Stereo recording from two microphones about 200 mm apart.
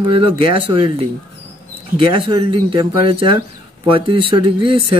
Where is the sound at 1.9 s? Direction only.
25° right (ahead or behind).